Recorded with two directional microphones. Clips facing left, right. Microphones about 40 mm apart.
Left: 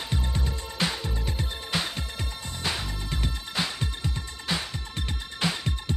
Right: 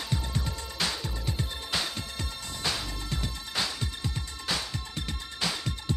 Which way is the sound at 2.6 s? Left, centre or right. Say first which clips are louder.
Left 1 dB; left.